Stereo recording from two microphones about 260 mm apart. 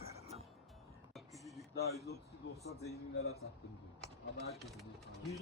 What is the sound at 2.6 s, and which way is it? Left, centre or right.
Speech, left.